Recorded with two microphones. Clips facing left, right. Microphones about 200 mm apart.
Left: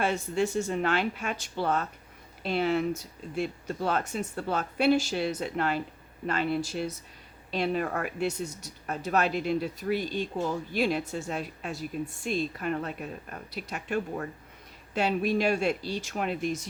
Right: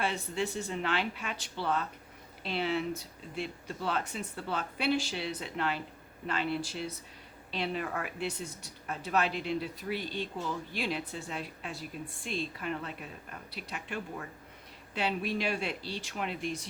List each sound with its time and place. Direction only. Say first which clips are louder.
0.0 s speech: left 6 dB; 45° left (ahead or behind)